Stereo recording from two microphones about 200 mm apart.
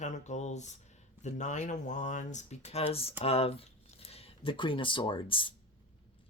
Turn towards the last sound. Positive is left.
turn(degrees=25)  # may be behind; listen again after turning